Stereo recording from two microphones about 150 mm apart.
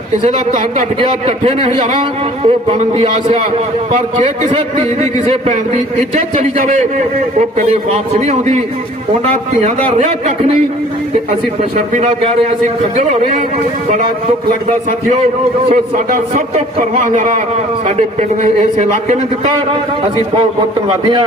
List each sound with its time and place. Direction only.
0.7 s a man's voice: 45° right (ahead or behind)
5.2 s a man's voice: 50° right (ahead or behind)
11.9 s a man's voice: 45° right (ahead or behind)
15.7 s a man's voice: 60° right (ahead or behind)